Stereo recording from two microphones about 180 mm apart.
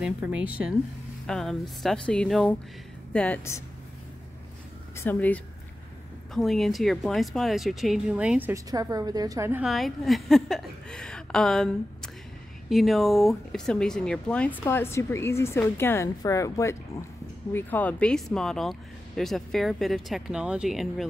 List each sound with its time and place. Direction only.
0.0 s speech: 5° right (ahead or behind); by 3.6 s 10° left (ahead or behind)
4.9 s speech: 10° left (ahead or behind); by 9.7 s 15° right (ahead or behind)
9.7 s speech: centre (ahead or behind)